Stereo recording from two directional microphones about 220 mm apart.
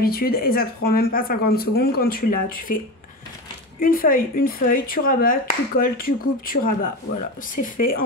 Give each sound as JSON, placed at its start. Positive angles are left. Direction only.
{"t": 0.0, "sound": "speech", "side_deg": 45}
{"t": 3.8, "sound": "speech", "side_deg": 40}
{"t": 7.7, "sound": "speech", "side_deg": 40}